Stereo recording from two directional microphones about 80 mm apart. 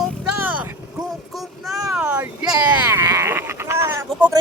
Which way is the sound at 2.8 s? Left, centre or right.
Right.